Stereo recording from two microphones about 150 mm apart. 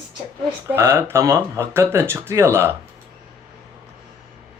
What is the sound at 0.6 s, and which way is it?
Speech, 15° right (ahead or behind).